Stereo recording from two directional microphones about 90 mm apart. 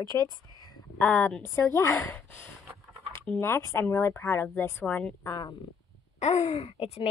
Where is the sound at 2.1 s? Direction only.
25° left (ahead or behind).